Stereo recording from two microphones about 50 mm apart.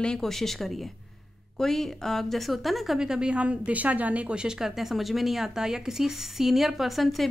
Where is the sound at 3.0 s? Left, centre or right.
Centre.